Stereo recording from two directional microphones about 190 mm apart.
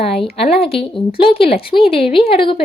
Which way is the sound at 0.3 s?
30° left (ahead or behind).